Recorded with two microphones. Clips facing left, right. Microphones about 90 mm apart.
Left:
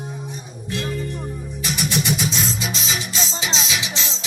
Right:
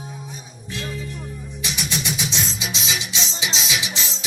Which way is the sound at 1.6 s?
50° left (ahead or behind).